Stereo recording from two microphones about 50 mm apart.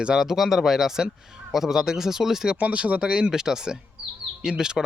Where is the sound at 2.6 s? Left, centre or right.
Right.